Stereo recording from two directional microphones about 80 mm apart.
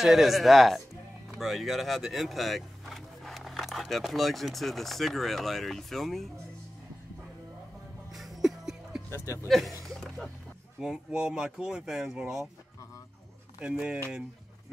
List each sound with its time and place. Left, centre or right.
0.0 s speech: centre
8.1 s music: centre
9.5 s speech: centre
9.8 s a sound: centre
10.8 s speech: centre
13.6 s speech: centre